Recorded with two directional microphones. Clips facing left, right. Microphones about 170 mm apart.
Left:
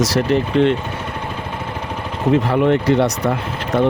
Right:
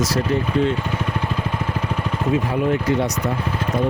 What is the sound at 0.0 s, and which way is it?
Speech, 80° left.